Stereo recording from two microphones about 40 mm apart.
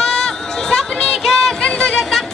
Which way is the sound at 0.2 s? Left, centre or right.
Centre.